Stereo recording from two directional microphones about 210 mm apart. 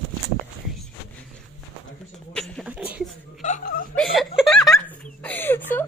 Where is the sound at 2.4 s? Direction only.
Centre (ahead or behind).